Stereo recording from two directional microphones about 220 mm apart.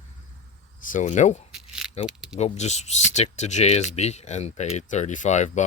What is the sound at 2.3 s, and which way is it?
Speech, 30° left (ahead or behind).